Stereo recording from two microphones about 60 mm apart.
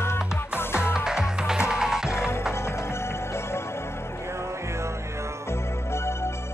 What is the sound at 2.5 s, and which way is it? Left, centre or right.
Music, left.